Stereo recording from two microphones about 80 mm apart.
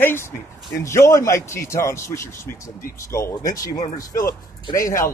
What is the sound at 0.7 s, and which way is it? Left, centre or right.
A man's voice, left.